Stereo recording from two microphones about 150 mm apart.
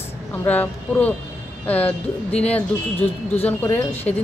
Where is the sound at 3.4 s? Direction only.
10° left (ahead or behind).